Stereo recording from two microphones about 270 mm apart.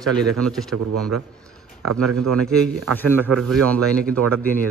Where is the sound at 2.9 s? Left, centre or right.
Centre.